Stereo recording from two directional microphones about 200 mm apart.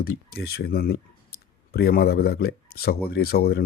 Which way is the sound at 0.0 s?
50° left (ahead or behind).